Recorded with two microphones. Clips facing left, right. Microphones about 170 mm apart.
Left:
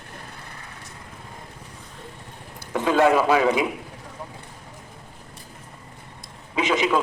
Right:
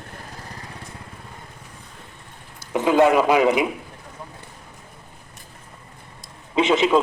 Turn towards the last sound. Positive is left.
turn(degrees=-25)  # may be behind; listen again after turning